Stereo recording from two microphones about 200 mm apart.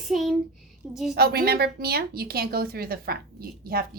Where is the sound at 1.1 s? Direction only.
50° right (ahead or behind).